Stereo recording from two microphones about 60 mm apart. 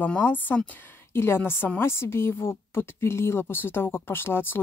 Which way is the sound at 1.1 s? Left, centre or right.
Left.